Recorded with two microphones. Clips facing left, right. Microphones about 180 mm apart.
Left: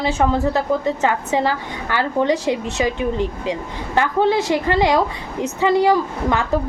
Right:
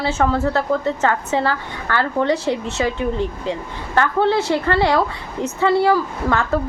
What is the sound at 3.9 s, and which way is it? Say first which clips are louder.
A woman's voice: even; 15° left (ahead or behind).